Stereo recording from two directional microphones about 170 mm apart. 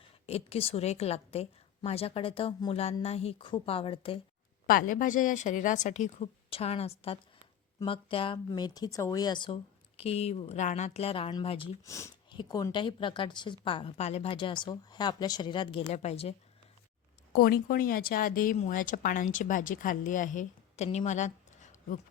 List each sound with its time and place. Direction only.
0.0 s a woman's voice: 35° left (ahead or behind)
4.6 s a woman's voice: 55° left (ahead or behind); by 11.7 s 30° left (ahead or behind)
11.9 s a woman's voice: 15° left (ahead or behind)
15.9 s a woman's voice: 40° left (ahead or behind)
17.3 s speech: 60° left (ahead or behind)